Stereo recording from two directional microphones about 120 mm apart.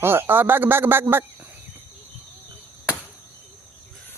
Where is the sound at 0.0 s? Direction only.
20° right (ahead or behind).